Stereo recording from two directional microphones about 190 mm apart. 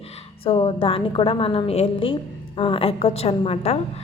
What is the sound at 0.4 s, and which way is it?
A woman's voice, 30° left (ahead or behind).